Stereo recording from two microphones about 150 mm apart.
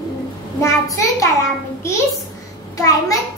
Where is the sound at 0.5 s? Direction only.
20° left (ahead or behind).